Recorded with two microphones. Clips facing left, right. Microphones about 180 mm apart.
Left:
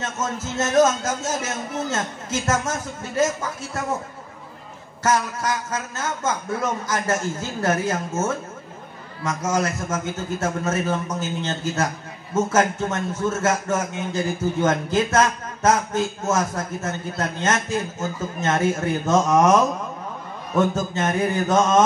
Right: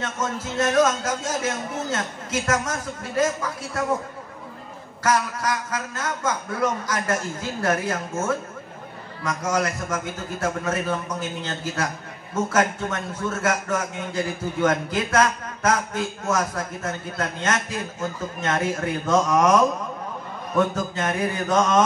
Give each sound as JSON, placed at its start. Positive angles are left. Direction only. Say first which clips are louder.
{"t": 0.0, "sound": "a man's voice", "louder": "even", "side_deg": 25}
{"t": 5.0, "sound": "a man's voice", "louder": "left 1 dB", "side_deg": 25}
{"t": 20.7, "sound": "a man's voice", "louder": "left 2 dB", "side_deg": 25}